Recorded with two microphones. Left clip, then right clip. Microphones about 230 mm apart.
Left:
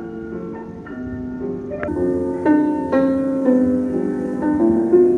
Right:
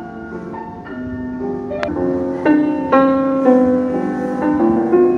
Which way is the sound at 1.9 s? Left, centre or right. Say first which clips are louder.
Left 2 dB; right.